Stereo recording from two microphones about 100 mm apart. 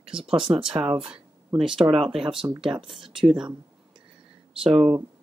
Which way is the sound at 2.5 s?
35° right (ahead or behind).